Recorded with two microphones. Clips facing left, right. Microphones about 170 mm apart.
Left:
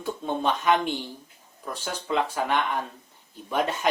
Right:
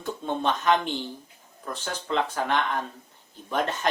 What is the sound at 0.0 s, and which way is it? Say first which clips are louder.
Speech: left 1 dB; 5° left (ahead or behind).